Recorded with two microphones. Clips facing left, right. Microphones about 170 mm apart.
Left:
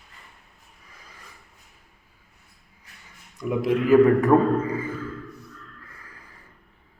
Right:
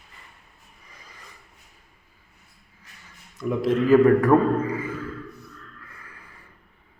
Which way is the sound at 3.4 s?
15° left (ahead or behind).